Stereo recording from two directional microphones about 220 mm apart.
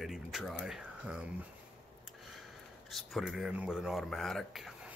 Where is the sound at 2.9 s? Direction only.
Centre (ahead or behind).